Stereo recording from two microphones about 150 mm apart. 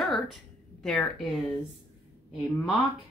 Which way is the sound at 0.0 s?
Centre (ahead or behind).